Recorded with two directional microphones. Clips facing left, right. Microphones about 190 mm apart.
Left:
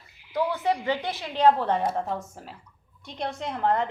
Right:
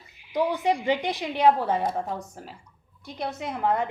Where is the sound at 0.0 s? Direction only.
15° right (ahead or behind).